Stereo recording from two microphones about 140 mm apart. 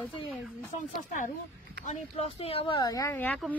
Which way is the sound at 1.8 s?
50° left (ahead or behind).